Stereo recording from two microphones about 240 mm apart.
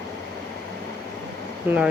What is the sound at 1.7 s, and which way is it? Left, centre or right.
Speech, centre.